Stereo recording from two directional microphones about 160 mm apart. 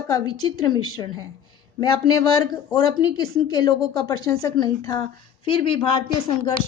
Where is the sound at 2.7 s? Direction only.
30° left (ahead or behind).